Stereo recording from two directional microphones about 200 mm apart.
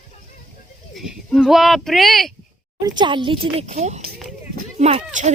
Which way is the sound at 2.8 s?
20° right (ahead or behind).